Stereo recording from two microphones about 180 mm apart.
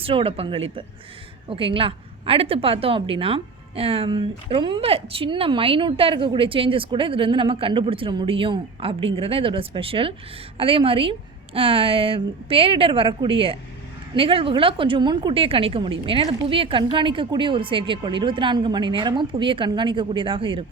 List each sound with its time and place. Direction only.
0.0 s a woman's voice: 30° right (ahead or behind)